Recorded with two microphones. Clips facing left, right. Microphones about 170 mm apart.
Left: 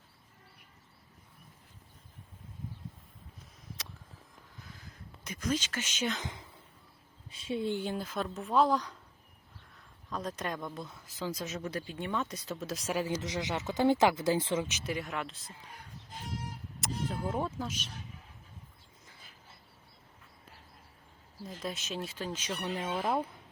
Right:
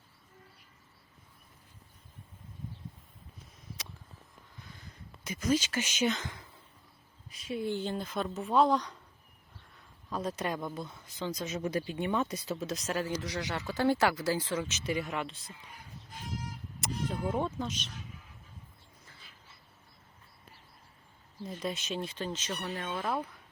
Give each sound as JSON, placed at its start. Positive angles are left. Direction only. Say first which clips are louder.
{"t": 4.6, "sound": "a sound", "louder": "even", "side_deg": 0}
{"t": 6.2, "sound": "a sound", "louder": "left 1 dB", "side_deg": 20}
{"t": 7.8, "sound": "speech", "louder": "right 1 dB", "side_deg": 5}
{"t": 10.1, "sound": "speech", "louder": "right 3 dB", "side_deg": -5}
{"t": 11.6, "sound": "speech", "louder": "right 5 dB", "side_deg": -15}
{"t": 14.8, "sound": "speech", "louder": "right 2 dB", "side_deg": 0}
{"t": 16.8, "sound": "speech", "louder": "right 1 dB", "side_deg": 0}
{"t": 21.6, "sound": "speech", "louder": "right 2 dB", "side_deg": 0}
{"t": 22.6, "sound": "speech", "louder": "left 3 dB", "side_deg": 25}